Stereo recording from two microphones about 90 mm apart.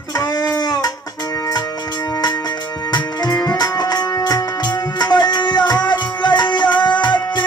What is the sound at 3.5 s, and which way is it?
Music, 50° left (ahead or behind).